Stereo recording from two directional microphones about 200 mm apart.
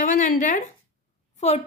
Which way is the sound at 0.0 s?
40° left (ahead or behind).